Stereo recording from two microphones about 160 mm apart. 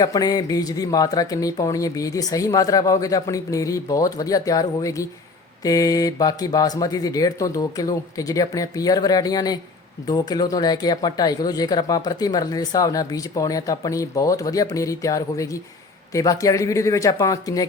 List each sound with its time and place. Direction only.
0.0 s speech: 25° left (ahead or behind)